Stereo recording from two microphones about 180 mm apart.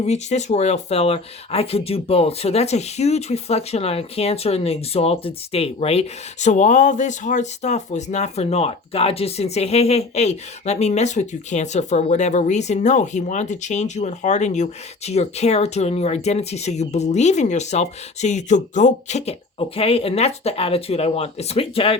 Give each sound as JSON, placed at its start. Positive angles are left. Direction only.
{"t": 0.0, "sound": "speech", "side_deg": 40}